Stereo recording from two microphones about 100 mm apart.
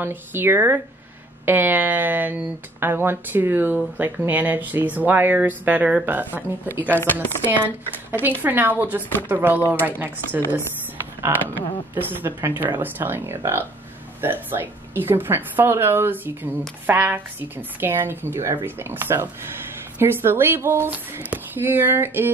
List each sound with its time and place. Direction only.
0.0 s a woman's voice: 20° right (ahead or behind)
8.1 s a woman's voice: 20° right (ahead or behind)